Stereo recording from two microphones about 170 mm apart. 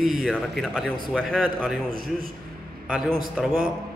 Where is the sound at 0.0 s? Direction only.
Centre (ahead or behind).